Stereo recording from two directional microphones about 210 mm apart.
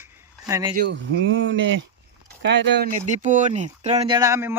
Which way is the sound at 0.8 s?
55° right (ahead or behind).